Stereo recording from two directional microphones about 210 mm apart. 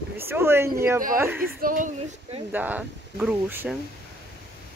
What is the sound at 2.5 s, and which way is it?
Speech, 10° right (ahead or behind).